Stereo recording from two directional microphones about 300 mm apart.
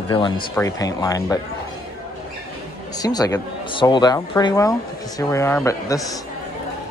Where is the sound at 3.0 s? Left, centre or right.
Centre.